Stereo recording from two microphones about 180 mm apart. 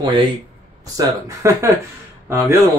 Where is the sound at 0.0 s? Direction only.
25° right (ahead or behind).